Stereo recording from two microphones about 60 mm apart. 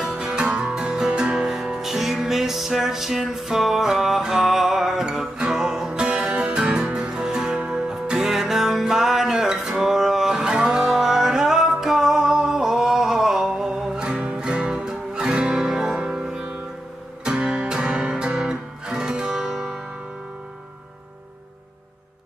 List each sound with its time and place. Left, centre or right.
0.0 s music: centre